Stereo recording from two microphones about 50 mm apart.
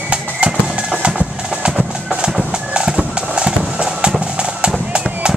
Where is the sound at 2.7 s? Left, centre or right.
Centre.